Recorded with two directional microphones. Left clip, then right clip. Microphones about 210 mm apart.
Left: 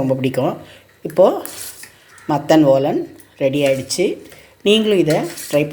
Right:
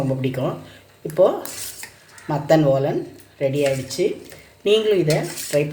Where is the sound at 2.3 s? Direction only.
30° left (ahead or behind).